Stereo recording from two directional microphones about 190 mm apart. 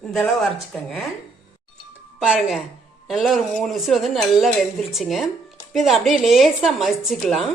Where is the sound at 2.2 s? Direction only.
Centre (ahead or behind).